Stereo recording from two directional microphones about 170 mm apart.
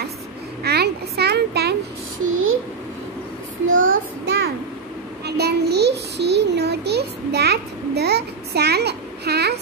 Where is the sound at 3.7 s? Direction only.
65° right (ahead or behind).